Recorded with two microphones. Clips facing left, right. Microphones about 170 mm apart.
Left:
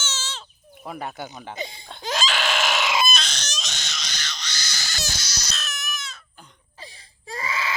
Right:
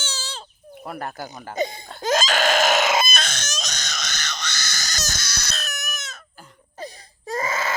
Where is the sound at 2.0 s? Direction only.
45° right (ahead or behind).